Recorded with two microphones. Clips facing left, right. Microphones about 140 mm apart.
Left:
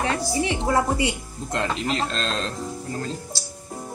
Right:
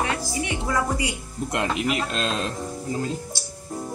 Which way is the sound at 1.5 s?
15° right (ahead or behind).